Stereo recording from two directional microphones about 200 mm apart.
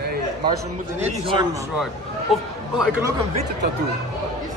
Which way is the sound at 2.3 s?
Centre (ahead or behind).